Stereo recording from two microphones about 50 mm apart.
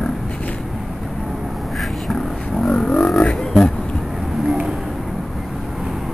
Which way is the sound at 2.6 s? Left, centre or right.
Centre.